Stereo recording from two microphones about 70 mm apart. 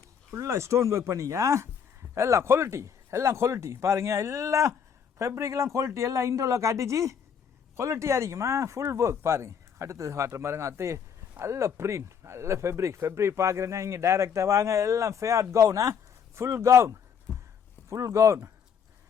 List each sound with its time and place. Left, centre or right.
0.3 s speech: right